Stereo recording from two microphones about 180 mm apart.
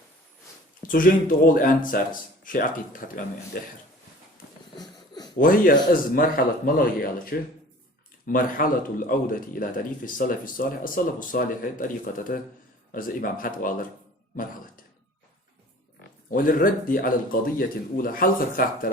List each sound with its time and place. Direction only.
0.8 s speech: 50° left (ahead or behind)
4.8 s a sound: 20° left (ahead or behind)
5.4 s speech: 50° left (ahead or behind)
16.3 s speech: 50° left (ahead or behind)